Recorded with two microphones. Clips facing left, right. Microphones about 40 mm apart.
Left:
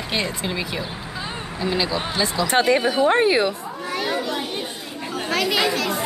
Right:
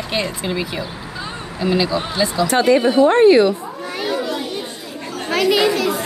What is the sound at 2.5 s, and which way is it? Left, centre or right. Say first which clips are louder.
Speech: right 3 dB; left.